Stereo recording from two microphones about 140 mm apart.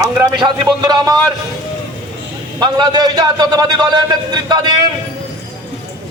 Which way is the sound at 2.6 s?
30° right (ahead or behind).